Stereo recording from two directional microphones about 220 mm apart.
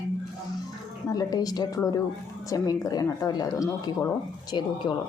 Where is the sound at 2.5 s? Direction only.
15° left (ahead or behind).